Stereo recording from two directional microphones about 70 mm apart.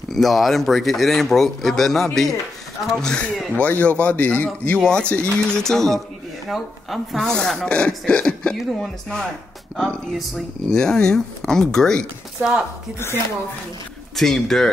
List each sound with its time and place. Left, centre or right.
0.1 s a man's voice: centre
9.8 s speech: centre
12.4 s speech: centre
14.1 s speech: centre